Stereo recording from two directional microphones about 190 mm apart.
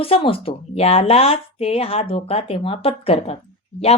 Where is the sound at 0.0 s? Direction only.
30° left (ahead or behind).